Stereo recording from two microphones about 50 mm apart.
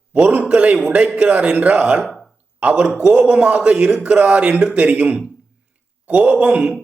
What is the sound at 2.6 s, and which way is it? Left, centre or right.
A man's voice, right.